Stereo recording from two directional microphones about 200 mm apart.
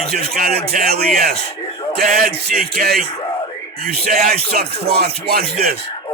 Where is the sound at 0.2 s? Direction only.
50° right (ahead or behind).